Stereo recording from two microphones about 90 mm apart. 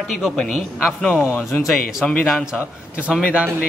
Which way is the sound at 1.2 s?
30° left (ahead or behind).